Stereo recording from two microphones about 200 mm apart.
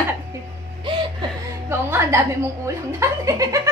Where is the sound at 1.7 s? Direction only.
10° right (ahead or behind).